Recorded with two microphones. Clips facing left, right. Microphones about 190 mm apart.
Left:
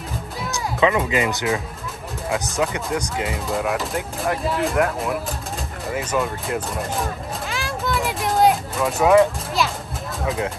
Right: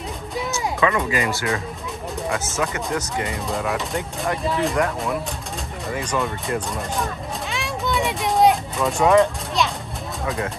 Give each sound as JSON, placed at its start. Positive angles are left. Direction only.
{"t": 0.7, "sound": "speech", "side_deg": 15}
{"t": 3.3, "sound": "speech", "side_deg": 0}
{"t": 5.9, "sound": "a sound", "side_deg": 5}
{"t": 10.2, "sound": "speech", "side_deg": 0}